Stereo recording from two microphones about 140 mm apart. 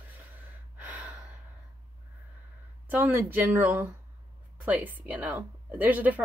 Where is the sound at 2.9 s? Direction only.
15° right (ahead or behind).